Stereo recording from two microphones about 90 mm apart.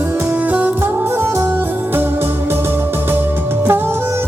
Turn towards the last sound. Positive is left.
turn(degrees=-25)  # may be behind; listen again after turning